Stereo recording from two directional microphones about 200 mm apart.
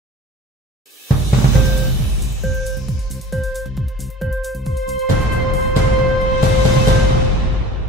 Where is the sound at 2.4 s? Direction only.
Centre (ahead or behind).